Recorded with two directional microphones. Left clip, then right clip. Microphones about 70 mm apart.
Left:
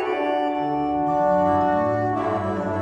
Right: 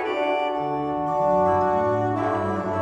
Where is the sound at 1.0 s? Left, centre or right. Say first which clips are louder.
Even; left.